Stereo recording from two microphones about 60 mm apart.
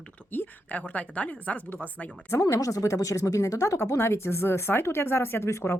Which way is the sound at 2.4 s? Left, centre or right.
Left.